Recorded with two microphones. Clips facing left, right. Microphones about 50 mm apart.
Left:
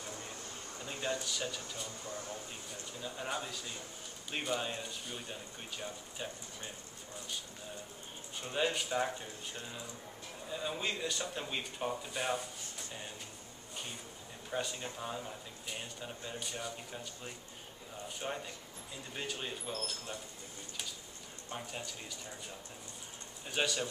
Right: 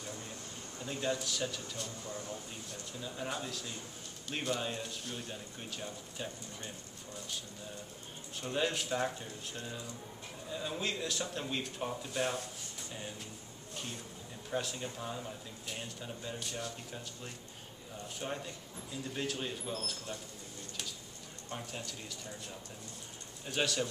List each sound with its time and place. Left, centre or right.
0.8 s speech: centre
8.4 s speech: centre
14.5 s speech: centre
21.5 s speech: centre
23.4 s speech: centre